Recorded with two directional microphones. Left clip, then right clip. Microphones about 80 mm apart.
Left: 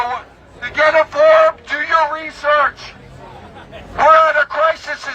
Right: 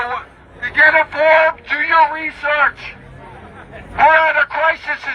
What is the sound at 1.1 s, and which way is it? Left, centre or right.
Speech, left.